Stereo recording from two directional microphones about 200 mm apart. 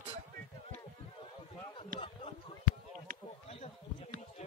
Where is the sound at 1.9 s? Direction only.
30° left (ahead or behind).